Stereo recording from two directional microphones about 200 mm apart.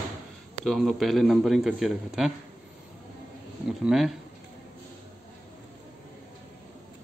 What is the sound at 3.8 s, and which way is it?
Speech, centre (ahead or behind).